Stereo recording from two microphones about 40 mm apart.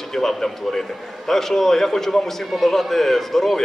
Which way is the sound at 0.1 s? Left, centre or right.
Centre.